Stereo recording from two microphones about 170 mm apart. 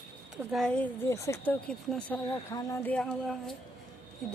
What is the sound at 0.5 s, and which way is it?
A woman's voice, 5° left (ahead or behind).